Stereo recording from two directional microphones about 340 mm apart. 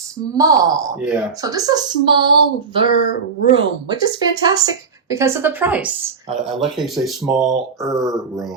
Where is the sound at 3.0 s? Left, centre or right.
Left.